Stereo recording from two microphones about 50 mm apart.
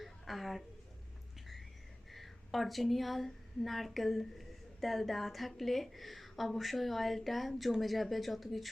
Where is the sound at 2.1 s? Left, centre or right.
Centre.